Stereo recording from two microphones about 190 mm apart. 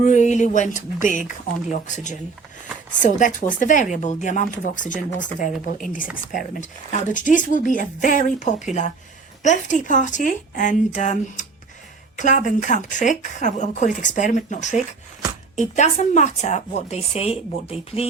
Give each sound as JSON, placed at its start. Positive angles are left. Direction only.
{"t": 0.0, "sound": "a woman's voice", "side_deg": 40}
{"t": 3.0, "sound": "a woman's voice", "side_deg": 45}